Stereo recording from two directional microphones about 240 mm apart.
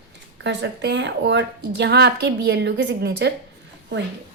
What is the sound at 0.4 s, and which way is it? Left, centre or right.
A woman's voice, right.